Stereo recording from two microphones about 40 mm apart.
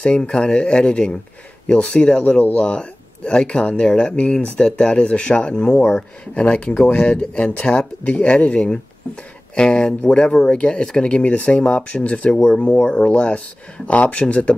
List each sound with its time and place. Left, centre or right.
0.0 s speech: left
12.4 s speech: left